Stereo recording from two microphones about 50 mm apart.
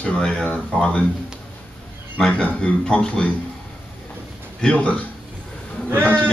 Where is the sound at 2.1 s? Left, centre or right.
Centre.